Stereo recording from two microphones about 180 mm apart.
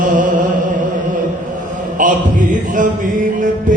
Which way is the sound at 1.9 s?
45° right (ahead or behind).